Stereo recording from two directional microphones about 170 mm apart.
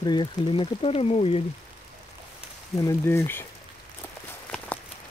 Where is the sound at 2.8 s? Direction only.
15° left (ahead or behind).